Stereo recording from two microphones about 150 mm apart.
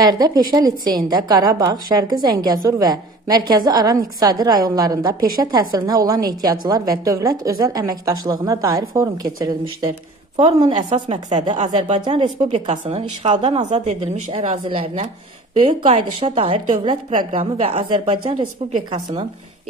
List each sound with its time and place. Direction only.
0.0 s a woman's voice: 25° right (ahead or behind)
10.4 s a woman's voice: 45° right (ahead or behind)
12.4 s a woman's voice: 45° right (ahead or behind)